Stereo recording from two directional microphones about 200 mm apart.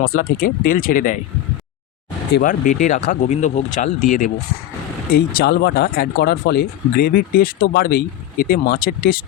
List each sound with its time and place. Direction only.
0.2 s speech: 45° left (ahead or behind)
2.4 s speech: 40° left (ahead or behind)